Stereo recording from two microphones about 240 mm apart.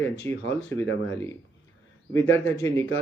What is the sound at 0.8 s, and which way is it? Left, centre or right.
Speech, left.